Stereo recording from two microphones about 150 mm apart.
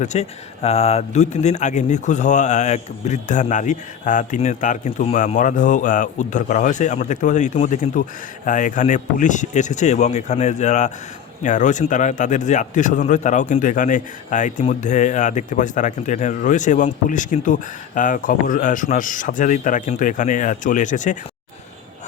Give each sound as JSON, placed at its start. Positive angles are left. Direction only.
{"t": 0.0, "sound": "speech", "side_deg": 50}